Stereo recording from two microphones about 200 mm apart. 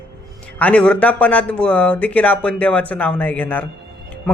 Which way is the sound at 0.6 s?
5° left (ahead or behind).